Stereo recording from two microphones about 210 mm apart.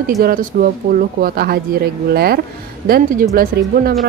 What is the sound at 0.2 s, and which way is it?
A woman's voice, 45° right (ahead or behind).